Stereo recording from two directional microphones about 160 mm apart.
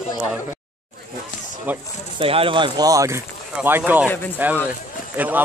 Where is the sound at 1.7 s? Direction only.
10° right (ahead or behind).